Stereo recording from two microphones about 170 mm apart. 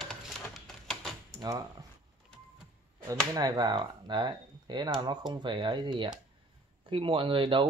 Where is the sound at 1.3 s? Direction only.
20° right (ahead or behind).